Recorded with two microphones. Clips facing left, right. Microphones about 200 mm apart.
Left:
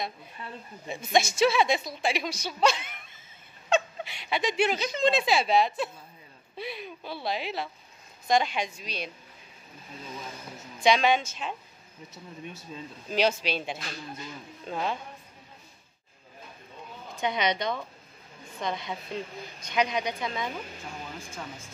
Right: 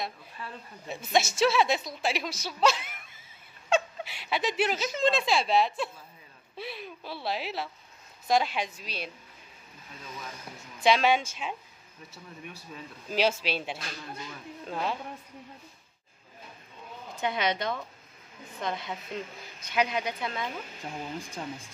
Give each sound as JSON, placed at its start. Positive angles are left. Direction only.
{"t": 0.8, "sound": "a woman's voice", "side_deg": -5}
{"t": 10.8, "sound": "speech", "side_deg": -5}
{"t": 12.1, "sound": "speech", "side_deg": 25}
{"t": 13.1, "sound": "a woman's voice", "side_deg": -5}
{"t": 17.2, "sound": "a woman's voice", "side_deg": -5}